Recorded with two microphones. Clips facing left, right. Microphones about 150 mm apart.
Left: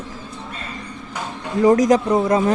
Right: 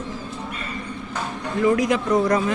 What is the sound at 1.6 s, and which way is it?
Speech, 40° left (ahead or behind).